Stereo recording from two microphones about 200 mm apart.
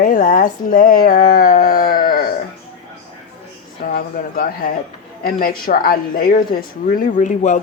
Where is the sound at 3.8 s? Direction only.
45° left (ahead or behind).